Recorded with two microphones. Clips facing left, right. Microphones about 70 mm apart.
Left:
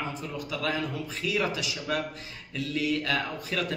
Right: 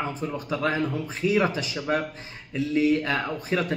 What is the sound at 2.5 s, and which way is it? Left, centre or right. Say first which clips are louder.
A man's voice: right 7 dB; right.